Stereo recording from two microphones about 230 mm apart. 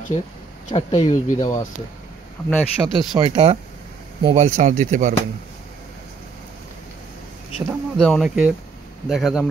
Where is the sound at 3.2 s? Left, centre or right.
Right.